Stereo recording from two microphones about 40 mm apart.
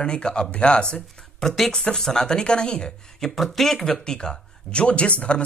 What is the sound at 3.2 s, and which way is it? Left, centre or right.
Speech, centre.